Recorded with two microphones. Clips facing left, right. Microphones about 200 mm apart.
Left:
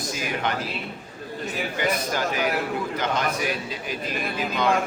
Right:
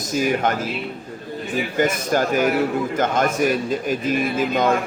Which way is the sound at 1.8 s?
45° right (ahead or behind).